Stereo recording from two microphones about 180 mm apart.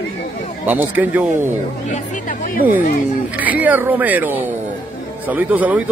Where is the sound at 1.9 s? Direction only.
50° left (ahead or behind).